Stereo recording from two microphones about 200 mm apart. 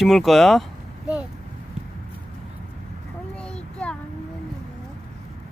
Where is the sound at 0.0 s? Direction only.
Centre (ahead or behind).